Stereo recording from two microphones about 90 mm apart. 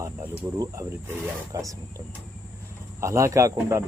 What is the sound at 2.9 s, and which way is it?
Speech, 35° right (ahead or behind).